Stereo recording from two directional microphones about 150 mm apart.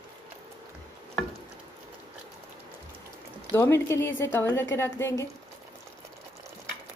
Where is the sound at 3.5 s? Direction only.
15° left (ahead or behind).